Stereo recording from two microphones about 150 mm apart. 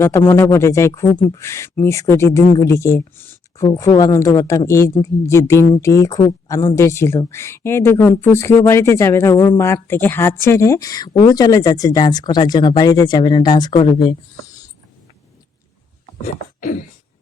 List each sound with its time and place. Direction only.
0.0 s speech: 15° left (ahead or behind); by 14.2 s 30° left (ahead or behind)
16.2 s speech: 60° left (ahead or behind)